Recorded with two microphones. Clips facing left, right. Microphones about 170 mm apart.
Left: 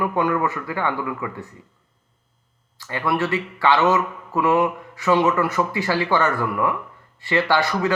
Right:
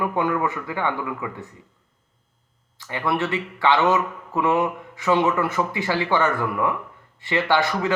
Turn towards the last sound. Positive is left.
turn(degrees=-20)  # may be behind; listen again after turning